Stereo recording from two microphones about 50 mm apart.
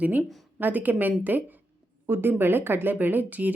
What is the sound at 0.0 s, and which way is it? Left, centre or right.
Speech, right.